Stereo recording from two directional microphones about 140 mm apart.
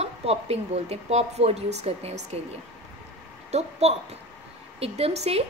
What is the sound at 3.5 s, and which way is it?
Speech, 50° right (ahead or behind).